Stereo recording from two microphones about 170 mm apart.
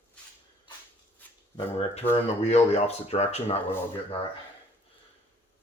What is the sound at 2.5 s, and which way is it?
Speech, 40° left (ahead or behind).